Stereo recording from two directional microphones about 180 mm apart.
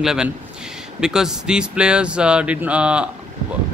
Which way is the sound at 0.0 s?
5° right (ahead or behind).